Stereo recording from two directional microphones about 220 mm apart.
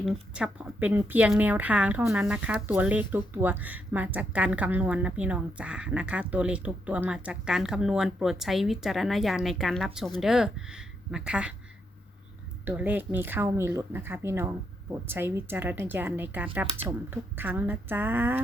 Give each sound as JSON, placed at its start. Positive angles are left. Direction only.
{"t": 0.0, "sound": "speech", "side_deg": -5}
{"t": 12.6, "sound": "speech", "side_deg": -10}